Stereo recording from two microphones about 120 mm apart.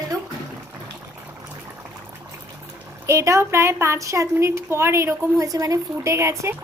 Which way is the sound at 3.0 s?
25° right (ahead or behind).